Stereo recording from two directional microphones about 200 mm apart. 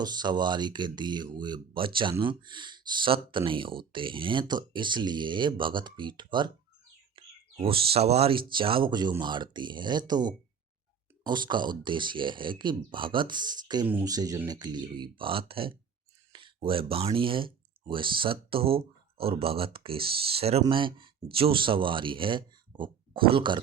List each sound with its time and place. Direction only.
0.0 s speech: 20° right (ahead or behind)
7.2 s bird: 25° right (ahead or behind)
7.5 s speech: 25° right (ahead or behind)